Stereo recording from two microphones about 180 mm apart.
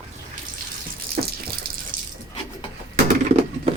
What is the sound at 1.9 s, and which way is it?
Water, 50° right (ahead or behind).